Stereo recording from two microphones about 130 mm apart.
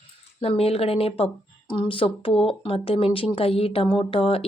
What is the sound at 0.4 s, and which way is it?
Speech, 50° left (ahead or behind).